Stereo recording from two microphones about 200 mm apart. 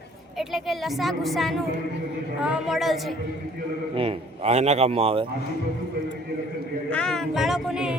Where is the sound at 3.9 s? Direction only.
30° right (ahead or behind).